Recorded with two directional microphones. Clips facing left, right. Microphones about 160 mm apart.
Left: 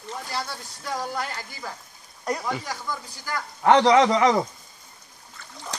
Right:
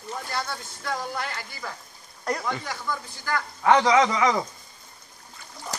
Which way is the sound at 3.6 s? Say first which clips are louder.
Left 3 dB; 35° left (ahead or behind).